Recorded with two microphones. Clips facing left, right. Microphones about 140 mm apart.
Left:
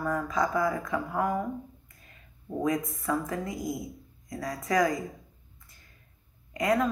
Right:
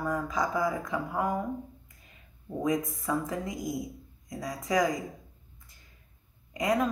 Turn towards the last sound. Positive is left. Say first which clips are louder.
# left 1 dB
turn(degrees=-15)  # may be behind; listen again after turning